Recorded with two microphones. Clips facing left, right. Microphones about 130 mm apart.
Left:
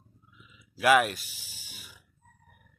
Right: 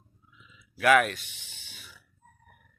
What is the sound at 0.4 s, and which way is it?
Speech, 10° left (ahead or behind).